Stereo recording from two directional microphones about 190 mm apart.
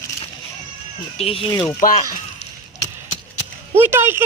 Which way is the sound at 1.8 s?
45° left (ahead or behind).